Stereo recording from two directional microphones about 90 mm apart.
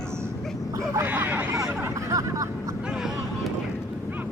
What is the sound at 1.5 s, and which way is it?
Hubbub, 35° right (ahead or behind).